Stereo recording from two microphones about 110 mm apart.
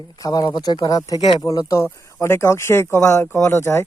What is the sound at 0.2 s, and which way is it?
Speech, 35° left (ahead or behind).